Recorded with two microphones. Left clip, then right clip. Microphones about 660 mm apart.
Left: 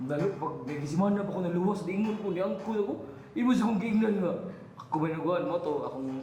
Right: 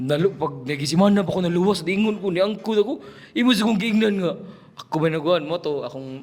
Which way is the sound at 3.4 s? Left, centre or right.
Right.